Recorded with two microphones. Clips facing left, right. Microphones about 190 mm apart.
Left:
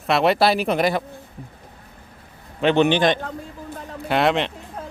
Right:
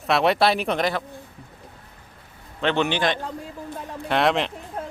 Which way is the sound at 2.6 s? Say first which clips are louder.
Left 5 dB; 15° left (ahead or behind).